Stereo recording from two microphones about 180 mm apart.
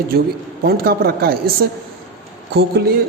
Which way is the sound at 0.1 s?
60° right (ahead or behind).